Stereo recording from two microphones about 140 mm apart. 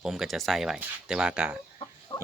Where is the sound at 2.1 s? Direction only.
25° left (ahead or behind).